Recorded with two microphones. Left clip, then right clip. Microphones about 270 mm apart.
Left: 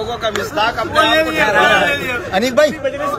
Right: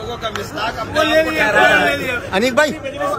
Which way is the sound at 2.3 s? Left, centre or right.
Centre.